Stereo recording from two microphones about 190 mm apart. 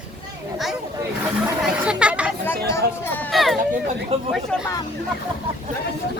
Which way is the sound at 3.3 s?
Centre (ahead or behind).